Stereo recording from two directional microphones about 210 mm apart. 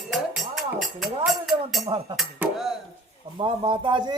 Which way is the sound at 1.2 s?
Centre (ahead or behind).